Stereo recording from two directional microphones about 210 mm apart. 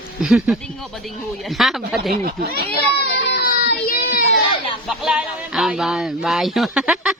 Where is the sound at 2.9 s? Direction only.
50° left (ahead or behind).